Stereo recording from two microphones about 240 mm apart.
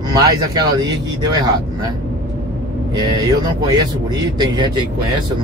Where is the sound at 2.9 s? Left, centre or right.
Centre.